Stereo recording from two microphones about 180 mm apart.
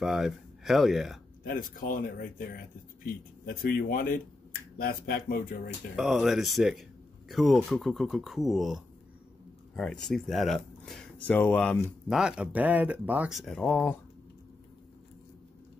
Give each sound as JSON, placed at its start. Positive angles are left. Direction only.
{"t": 0.0, "sound": "speech", "side_deg": 0}
{"t": 1.4, "sound": "speech", "side_deg": 55}
{"t": 5.9, "sound": "speech", "side_deg": 0}